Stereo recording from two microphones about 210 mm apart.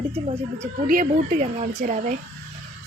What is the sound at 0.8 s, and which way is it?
Speech, 40° right (ahead or behind).